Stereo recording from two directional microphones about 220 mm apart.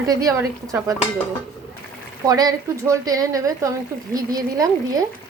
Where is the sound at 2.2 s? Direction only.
15° right (ahead or behind).